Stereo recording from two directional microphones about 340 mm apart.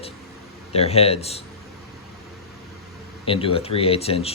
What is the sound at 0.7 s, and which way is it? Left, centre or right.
Speech, centre.